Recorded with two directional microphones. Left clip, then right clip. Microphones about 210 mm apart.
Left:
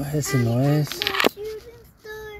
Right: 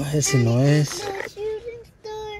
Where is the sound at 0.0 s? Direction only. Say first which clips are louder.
Right 3 dB; 20° right (ahead or behind).